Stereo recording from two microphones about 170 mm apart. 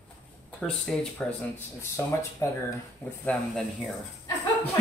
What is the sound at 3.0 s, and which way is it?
Speech, centre (ahead or behind).